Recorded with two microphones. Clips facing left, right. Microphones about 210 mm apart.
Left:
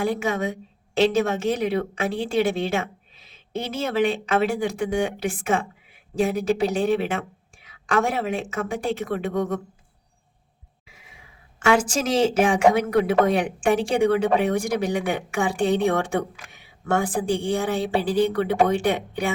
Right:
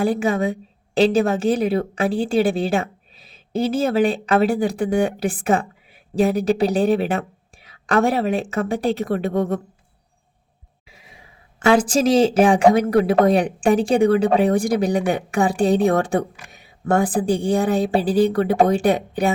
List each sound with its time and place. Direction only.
0.0 s a woman's voice: 30° right (ahead or behind)
11.6 s a woman's voice: 35° right (ahead or behind)